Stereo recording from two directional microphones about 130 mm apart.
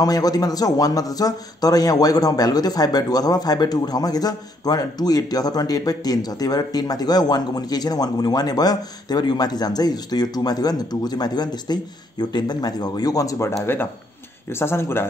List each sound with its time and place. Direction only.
0.0 s a man's voice: 30° left (ahead or behind)